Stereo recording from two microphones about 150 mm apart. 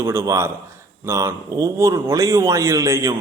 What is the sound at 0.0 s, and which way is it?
A man's voice, 15° right (ahead or behind).